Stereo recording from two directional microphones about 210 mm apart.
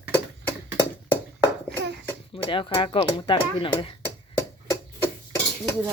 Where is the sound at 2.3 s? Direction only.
25° left (ahead or behind).